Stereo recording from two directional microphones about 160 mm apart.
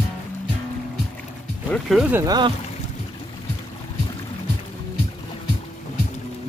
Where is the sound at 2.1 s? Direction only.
25° right (ahead or behind).